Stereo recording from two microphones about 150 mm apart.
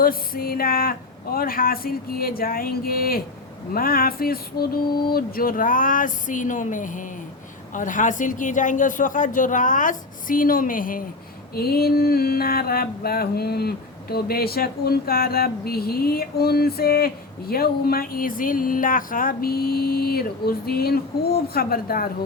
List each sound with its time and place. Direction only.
0.0 s speech: 75° left (ahead or behind)
3.8 s mantra: 75° left (ahead or behind)
11.5 s mantra: 90° left
17.5 s speech: 85° left